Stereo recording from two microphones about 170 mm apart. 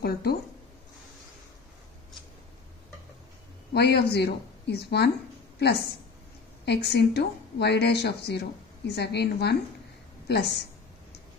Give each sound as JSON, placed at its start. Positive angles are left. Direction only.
{"t": 0.0, "sound": "a sound", "side_deg": 65}
{"t": 3.7, "sound": "speech", "side_deg": 75}
{"t": 6.6, "sound": "a woman's voice", "side_deg": 80}